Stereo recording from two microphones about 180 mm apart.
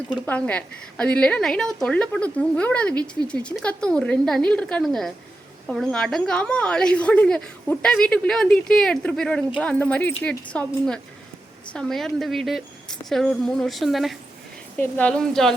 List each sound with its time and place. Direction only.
0.1 s a woman's voice: 10° left (ahead or behind)
2.9 s speech: 20° right (ahead or behind)
3.2 s a woman's voice: 5° left (ahead or behind)